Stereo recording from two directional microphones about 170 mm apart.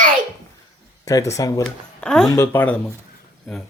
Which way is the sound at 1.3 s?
20° left (ahead or behind).